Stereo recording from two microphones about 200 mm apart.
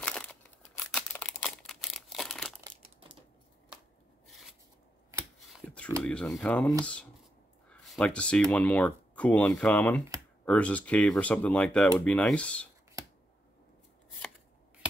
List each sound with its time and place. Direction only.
0.0 s crumpling: 5° left (ahead or behind)
2.6 s crumpling: 25° right (ahead or behind)
5.6 s a sound: 5° left (ahead or behind)
6.0 s speech: 5° left (ahead or behind)
7.7 s speech: 5° left (ahead or behind)